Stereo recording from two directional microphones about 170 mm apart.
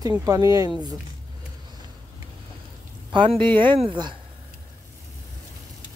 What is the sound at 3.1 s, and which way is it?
Speech, 30° right (ahead or behind).